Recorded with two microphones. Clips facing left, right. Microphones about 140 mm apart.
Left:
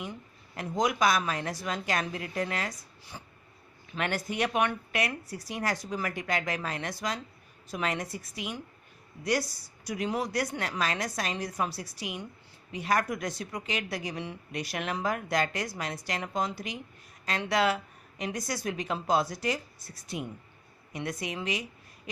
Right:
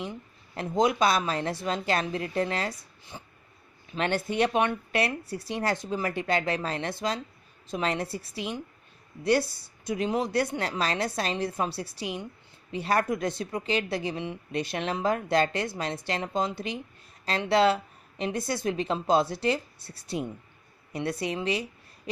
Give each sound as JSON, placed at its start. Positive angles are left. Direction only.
{"t": 0.0, "sound": "speech", "side_deg": -25}
{"t": 3.1, "sound": "dog", "side_deg": -25}
{"t": 3.9, "sound": "a woman's voice", "side_deg": -25}